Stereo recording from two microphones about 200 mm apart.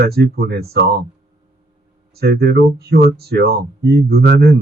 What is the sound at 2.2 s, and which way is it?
Speech, 55° right (ahead or behind).